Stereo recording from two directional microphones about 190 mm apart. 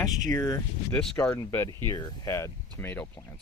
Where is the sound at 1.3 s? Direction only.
15° left (ahead or behind).